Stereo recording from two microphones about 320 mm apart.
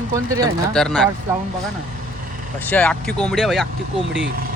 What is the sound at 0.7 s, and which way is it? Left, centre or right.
Speech, centre.